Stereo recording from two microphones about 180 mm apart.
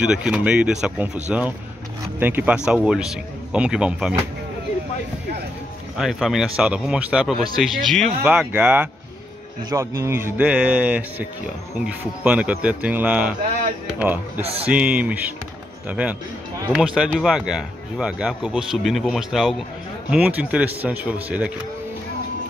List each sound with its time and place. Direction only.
0.0 s speech: 5° right (ahead or behind)
5.9 s speech: centre (ahead or behind)
14.4 s speech: 35° right (ahead or behind)
14.7 s speech: 5° right (ahead or behind)